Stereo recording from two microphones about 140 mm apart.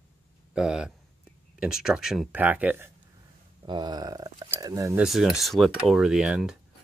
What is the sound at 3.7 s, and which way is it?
Speech, 30° right (ahead or behind).